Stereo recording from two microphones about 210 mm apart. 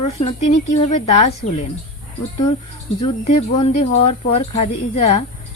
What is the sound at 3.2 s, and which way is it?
Speech, 30° left (ahead or behind).